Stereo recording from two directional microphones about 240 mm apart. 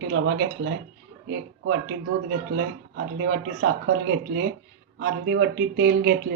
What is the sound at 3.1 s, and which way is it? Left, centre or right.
Speech, right.